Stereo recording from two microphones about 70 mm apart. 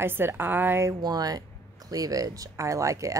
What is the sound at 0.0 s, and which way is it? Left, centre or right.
Speech, right.